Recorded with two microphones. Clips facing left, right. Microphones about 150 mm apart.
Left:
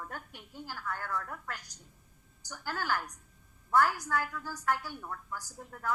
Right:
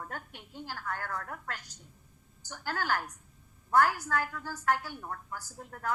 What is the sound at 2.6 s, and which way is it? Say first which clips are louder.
A woman's voice: right 2 dB; 40° right (ahead or behind).